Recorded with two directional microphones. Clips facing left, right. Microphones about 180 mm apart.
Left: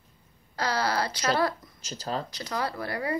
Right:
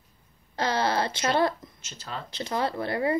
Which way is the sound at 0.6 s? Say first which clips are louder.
Right 2 dB; 25° right (ahead or behind).